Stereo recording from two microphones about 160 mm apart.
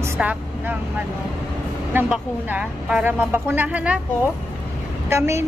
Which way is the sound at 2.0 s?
5° right (ahead or behind).